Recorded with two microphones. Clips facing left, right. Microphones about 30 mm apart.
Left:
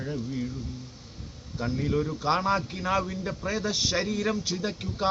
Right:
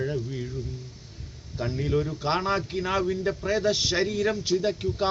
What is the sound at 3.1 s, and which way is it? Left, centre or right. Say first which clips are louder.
Speech: right 5 dB; centre.